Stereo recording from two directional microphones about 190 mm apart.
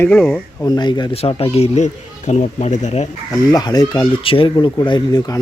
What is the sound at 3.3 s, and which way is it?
Speech, 20° left (ahead or behind).